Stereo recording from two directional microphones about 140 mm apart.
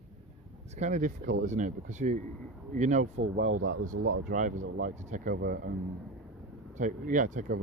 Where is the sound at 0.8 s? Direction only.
65° right (ahead or behind); by 5.6 s 90° right.